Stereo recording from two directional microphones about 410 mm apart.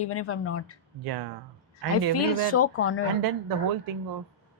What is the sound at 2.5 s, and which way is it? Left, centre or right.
Speech, left.